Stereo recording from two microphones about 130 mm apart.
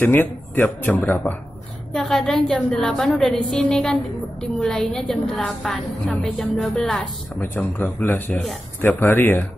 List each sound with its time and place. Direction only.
0.0 s speech: 15° left (ahead or behind)
2.0 s a woman's voice: centre (ahead or behind)